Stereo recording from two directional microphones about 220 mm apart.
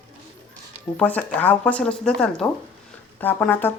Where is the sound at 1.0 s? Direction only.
5° left (ahead or behind).